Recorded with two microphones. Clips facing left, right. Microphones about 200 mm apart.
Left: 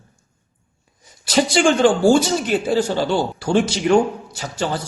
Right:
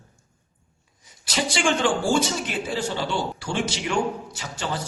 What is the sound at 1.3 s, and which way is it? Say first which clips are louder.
Speech: left 8 dB; 40° left (ahead or behind).